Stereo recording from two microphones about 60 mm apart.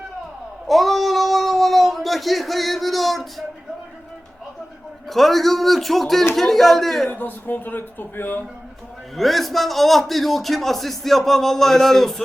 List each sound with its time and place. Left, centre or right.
0.7 s speech: centre
5.0 s a man's voice: centre
7.1 s speech: left
9.1 s a man's voice: centre